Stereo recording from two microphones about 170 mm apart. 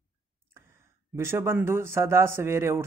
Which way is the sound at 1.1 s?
15° right (ahead or behind).